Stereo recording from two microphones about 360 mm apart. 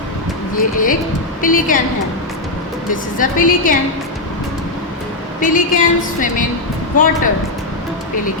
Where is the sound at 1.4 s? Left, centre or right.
Left.